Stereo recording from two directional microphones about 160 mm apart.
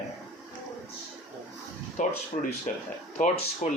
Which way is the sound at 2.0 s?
55° left (ahead or behind).